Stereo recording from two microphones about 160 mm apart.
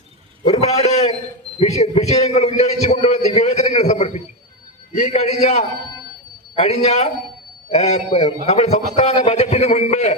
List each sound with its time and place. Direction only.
0.4 s a man's voice: 45° left (ahead or behind)
2.8 s a sound: 40° left (ahead or behind)
4.9 s a man's voice: 50° left (ahead or behind)